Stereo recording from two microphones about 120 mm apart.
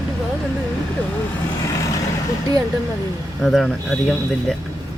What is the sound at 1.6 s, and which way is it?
Vehicle, 30° left (ahead or behind).